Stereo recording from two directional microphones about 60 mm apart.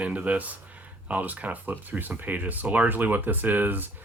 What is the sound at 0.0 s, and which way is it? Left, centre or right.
Speech, right.